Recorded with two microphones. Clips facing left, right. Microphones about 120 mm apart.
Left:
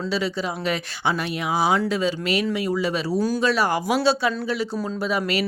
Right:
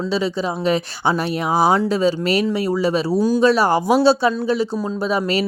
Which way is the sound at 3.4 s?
30° right (ahead or behind).